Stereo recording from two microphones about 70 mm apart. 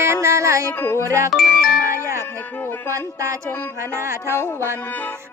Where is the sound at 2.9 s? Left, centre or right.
Right.